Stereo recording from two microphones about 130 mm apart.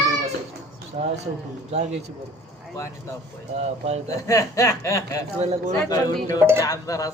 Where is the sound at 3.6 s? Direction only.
60° right (ahead or behind).